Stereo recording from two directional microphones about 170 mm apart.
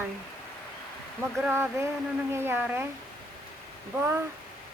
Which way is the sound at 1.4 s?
10° right (ahead or behind).